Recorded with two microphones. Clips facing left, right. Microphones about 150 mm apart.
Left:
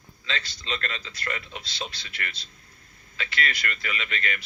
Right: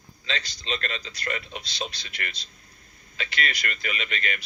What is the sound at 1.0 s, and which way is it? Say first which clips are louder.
A man's voice: right 2 dB; 35° right (ahead or behind).